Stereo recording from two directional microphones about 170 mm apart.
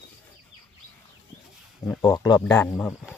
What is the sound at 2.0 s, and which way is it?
Speech, 20° left (ahead or behind).